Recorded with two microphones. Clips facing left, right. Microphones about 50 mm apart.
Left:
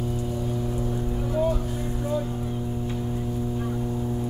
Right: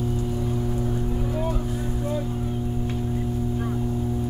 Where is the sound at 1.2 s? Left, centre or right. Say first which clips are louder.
Left 2 dB; centre.